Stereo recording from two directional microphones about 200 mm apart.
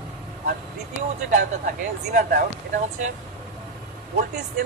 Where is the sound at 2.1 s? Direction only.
50° right (ahead or behind).